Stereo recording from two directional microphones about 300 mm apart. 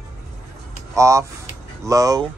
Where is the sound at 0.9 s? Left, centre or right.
Centre.